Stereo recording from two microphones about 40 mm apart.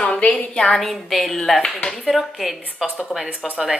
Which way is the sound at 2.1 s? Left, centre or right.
Centre.